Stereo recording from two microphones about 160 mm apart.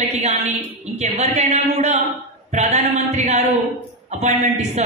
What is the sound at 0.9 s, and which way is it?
Speech, 45° right (ahead or behind).